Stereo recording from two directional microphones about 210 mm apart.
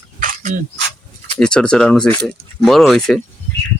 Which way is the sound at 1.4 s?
5° left (ahead or behind).